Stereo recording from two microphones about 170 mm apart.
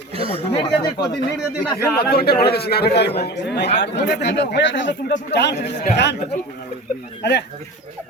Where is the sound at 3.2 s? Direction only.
85° left.